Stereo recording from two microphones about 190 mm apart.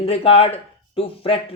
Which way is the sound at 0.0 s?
30° left (ahead or behind).